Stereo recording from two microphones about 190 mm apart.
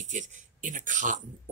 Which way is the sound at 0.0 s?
40° right (ahead or behind).